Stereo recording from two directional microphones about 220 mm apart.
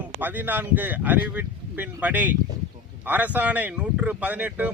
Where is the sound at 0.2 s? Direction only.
10° right (ahead or behind).